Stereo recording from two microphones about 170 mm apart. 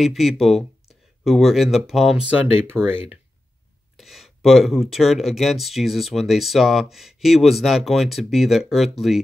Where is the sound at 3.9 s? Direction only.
Centre (ahead or behind).